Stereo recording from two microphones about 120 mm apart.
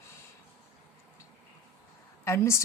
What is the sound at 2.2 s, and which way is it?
Speech, 20° left (ahead or behind).